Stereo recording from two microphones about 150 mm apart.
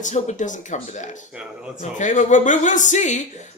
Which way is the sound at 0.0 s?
55° left (ahead or behind).